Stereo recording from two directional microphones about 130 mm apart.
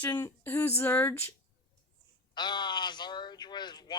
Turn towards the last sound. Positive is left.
turn(degrees=35)  # may be behind; listen again after turning